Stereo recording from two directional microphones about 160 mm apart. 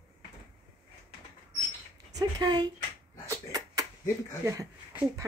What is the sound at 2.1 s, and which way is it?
Speech, 25° right (ahead or behind).